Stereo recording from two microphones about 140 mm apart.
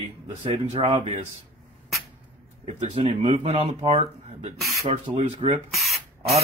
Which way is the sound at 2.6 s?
50° right (ahead or behind).